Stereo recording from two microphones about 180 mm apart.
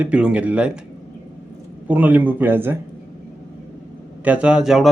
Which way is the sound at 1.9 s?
10° right (ahead or behind).